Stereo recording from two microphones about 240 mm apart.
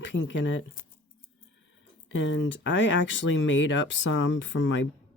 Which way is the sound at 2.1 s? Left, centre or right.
Left.